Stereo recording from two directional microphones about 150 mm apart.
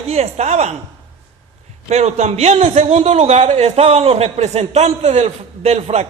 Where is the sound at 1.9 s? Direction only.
45° right (ahead or behind).